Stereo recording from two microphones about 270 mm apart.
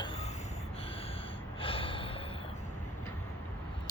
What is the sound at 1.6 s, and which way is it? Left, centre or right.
Gasp, centre.